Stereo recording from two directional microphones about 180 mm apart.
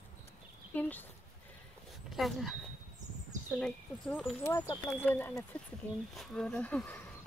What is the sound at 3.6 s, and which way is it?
Speech, 5° left (ahead or behind).